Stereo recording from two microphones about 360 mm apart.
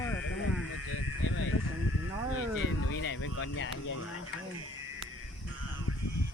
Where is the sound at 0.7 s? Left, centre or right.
Left.